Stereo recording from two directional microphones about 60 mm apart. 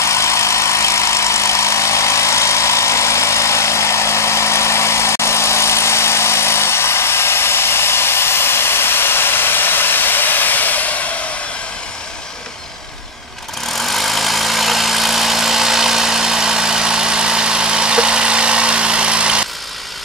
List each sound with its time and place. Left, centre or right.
0.0 s vehicle: left
13.7 s vehicle: centre